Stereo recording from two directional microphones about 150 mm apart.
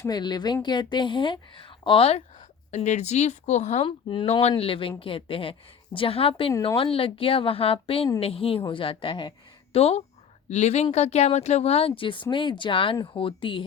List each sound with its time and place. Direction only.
0.0 s a woman's voice: 25° left (ahead or behind)
2.7 s speech: 50° left (ahead or behind)
3.8 s speech: 35° left (ahead or behind)